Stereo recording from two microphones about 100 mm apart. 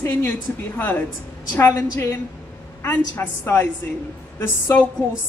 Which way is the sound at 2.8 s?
20° left (ahead or behind).